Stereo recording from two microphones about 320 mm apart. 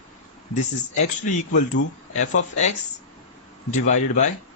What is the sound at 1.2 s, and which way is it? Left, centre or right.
Speech, left.